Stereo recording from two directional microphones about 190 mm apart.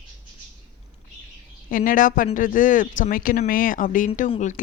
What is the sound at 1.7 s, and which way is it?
Speech, 45° left (ahead or behind).